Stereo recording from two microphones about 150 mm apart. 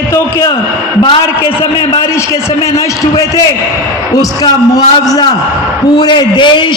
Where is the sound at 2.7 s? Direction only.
20° left (ahead or behind).